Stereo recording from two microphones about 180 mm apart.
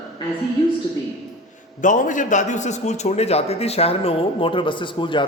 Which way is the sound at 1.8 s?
45° left (ahead or behind).